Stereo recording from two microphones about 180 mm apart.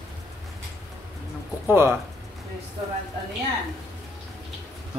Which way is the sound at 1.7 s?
15° right (ahead or behind).